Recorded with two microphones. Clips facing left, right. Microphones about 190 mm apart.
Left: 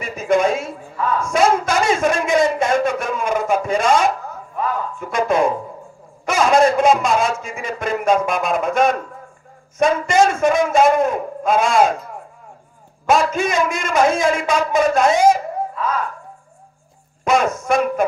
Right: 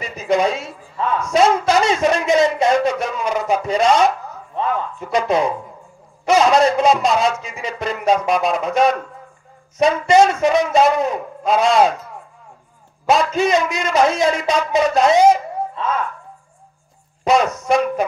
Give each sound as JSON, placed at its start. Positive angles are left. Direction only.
{"t": 0.0, "sound": "a sound", "side_deg": 50}
{"t": 5.0, "sound": "a man's voice", "side_deg": 50}
{"t": 13.0, "sound": "a man's voice", "side_deg": 50}
{"t": 15.7, "sound": "a child's voice", "side_deg": -25}
{"t": 17.2, "sound": "a man's voice", "side_deg": 50}